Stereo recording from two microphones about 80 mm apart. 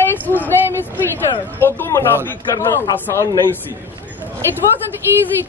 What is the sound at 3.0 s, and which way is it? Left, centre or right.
Speech, left.